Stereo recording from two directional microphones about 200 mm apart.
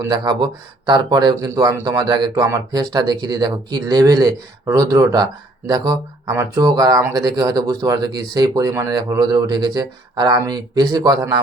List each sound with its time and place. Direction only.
0.0 s speech: 20° right (ahead or behind)